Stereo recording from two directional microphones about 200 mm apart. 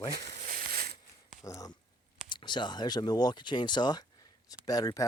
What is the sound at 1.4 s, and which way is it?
Speech, 15° left (ahead or behind).